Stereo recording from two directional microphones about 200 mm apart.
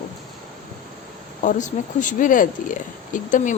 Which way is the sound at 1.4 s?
40° left (ahead or behind).